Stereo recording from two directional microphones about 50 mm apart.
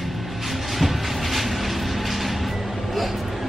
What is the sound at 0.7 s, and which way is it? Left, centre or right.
Train, centre.